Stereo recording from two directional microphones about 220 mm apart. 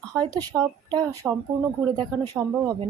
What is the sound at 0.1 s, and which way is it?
Speech, 15° right (ahead or behind).